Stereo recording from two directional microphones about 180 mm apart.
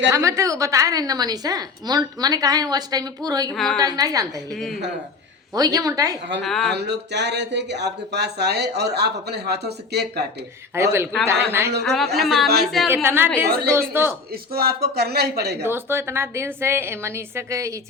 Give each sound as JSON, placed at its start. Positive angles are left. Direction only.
{"t": 0.1, "sound": "a woman's voice", "side_deg": -15}
{"t": 3.5, "sound": "a woman's voice", "side_deg": 0}
{"t": 3.8, "sound": "a woman's voice", "side_deg": -20}
{"t": 4.5, "sound": "a woman's voice", "side_deg": 0}
{"t": 5.5, "sound": "a woman's voice", "side_deg": -20}
{"t": 6.4, "sound": "a woman's voice", "side_deg": 0}
{"t": 6.7, "sound": "speech", "side_deg": -70}
{"t": 10.8, "sound": "a woman's voice", "side_deg": -15}
{"t": 11.8, "sound": "a woman's voice", "side_deg": 0}
{"t": 12.9, "sound": "a woman's voice", "side_deg": -10}
{"t": 14.5, "sound": "speech", "side_deg": -60}
{"t": 15.6, "sound": "a woman's voice", "side_deg": -15}